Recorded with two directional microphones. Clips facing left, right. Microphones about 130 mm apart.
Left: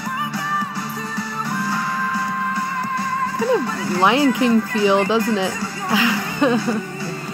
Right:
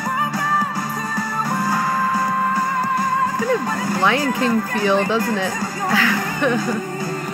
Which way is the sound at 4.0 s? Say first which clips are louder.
Left 4 dB; 20° left (ahead or behind).